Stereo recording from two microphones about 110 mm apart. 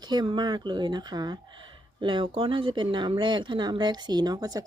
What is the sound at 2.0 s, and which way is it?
Speech, 50° right (ahead or behind).